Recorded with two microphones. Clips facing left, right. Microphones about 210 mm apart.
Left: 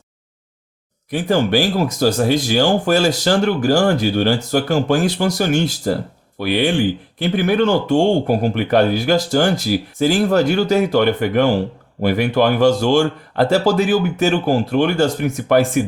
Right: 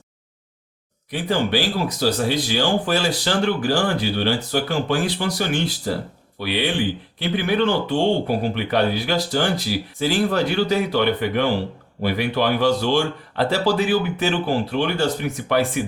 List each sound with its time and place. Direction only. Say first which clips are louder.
1.1 s speech: left 5 dB; 45° left (ahead or behind)